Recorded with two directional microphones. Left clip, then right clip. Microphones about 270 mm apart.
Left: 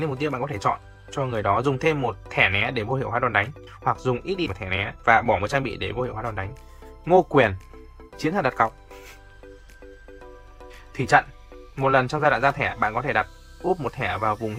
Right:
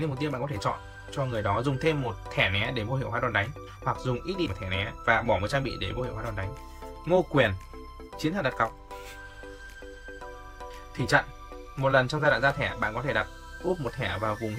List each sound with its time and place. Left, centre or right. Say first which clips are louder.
0.0 s speech: left 5 dB; centre
10.2 s music: right 3 dB; centre
10.9 s speech: left 6 dB; centre